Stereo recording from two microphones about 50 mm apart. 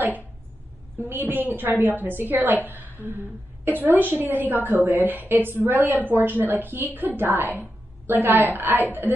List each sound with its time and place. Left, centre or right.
0.9 s a woman's voice: right